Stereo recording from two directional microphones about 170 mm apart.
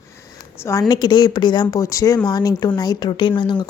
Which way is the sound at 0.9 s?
25° left (ahead or behind).